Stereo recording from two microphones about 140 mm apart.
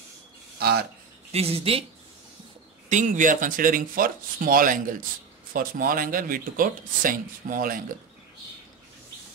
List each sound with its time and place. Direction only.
1.3 s speech: 45° right (ahead or behind)
2.9 s speech: 65° right (ahead or behind); by 4.9 s 80° right
5.5 s speech: 90° right